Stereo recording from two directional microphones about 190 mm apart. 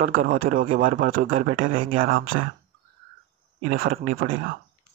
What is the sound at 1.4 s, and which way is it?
Speech, 90° right.